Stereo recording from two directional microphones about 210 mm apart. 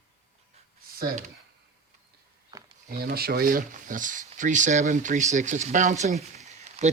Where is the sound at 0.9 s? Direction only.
45° right (ahead or behind).